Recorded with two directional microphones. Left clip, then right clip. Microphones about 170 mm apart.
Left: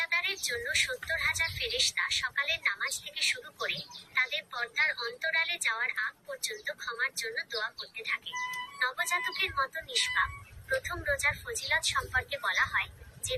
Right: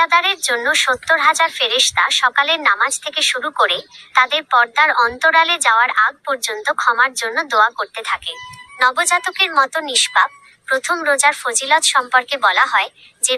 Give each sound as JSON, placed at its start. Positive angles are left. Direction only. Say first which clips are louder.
{"t": 0.0, "sound": "a woman's voice", "louder": "right 16 dB", "side_deg": -50}